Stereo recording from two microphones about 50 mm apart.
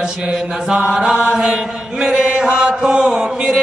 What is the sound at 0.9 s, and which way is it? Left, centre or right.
Chant, centre.